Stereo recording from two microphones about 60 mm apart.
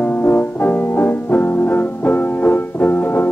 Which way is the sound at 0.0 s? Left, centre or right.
Left.